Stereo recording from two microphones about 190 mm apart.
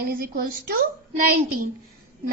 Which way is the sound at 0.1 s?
50° right (ahead or behind).